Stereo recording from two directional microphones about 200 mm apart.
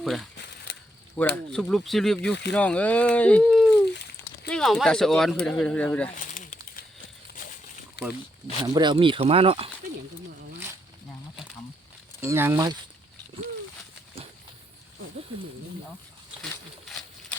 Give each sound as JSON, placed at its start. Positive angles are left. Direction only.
{"t": 0.0, "sound": "speech", "side_deg": 0}
{"t": 0.3, "sound": "a sound", "side_deg": 60}
{"t": 1.2, "sound": "speech", "side_deg": 10}
{"t": 6.1, "sound": "a sound", "side_deg": 40}
{"t": 8.0, "sound": "speech", "side_deg": 55}
{"t": 8.7, "sound": "speech", "side_deg": -20}
{"t": 12.2, "sound": "speech", "side_deg": -15}